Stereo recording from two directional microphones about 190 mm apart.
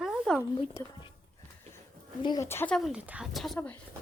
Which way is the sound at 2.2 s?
20° left (ahead or behind).